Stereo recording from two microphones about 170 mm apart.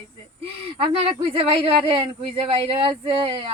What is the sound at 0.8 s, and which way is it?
Speech, 30° right (ahead or behind).